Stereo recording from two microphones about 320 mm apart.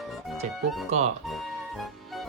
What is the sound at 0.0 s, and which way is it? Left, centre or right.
Music, centre.